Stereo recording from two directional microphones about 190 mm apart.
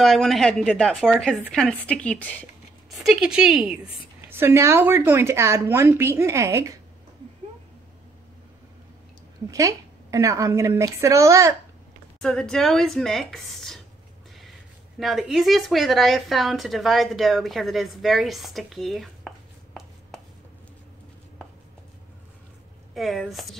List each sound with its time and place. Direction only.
0.0 s a woman's voice: centre (ahead or behind); by 6.7 s 15° right (ahead or behind)
9.5 s a woman's voice: 15° right (ahead or behind)
12.2 s speech: 5° left (ahead or behind)
15.0 s speech: centre (ahead or behind)
22.9 s speech: centre (ahead or behind)